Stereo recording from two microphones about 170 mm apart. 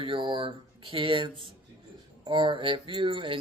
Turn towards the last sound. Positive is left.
turn(degrees=-30)  # may be behind; listen again after turning